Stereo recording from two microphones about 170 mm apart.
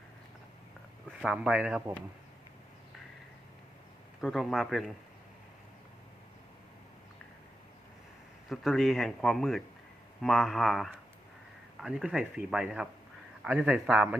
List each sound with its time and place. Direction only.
1.2 s speech: 5° right (ahead or behind)
4.2 s speech: centre (ahead or behind)
8.4 s speech: centre (ahead or behind)